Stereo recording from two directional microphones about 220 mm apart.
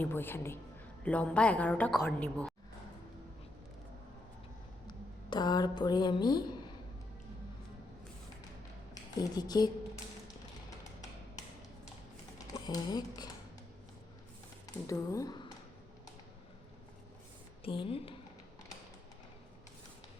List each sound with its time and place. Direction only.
0.0 s a woman's voice: 10° left (ahead or behind)
4.9 s a woman's voice: 20° left (ahead or behind)
9.3 s a woman's voice: 20° left (ahead or behind)
12.5 s speech: 20° left (ahead or behind)
14.8 s a woman's voice: 15° left (ahead or behind)
17.6 s a woman's voice: 25° left (ahead or behind)